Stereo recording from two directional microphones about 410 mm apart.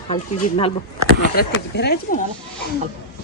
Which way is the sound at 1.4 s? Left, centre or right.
Left.